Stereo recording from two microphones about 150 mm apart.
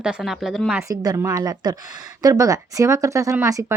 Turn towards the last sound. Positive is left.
turn(degrees=-20)  # may be behind; listen again after turning